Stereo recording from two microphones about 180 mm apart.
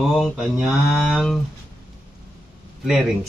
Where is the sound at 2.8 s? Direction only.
Centre (ahead or behind).